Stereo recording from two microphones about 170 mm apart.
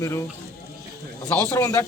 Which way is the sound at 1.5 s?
15° left (ahead or behind).